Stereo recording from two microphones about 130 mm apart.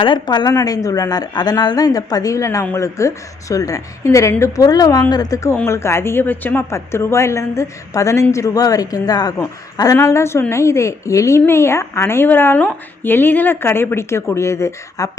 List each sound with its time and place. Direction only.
0.0 s a woman's voice: 35° left (ahead or behind)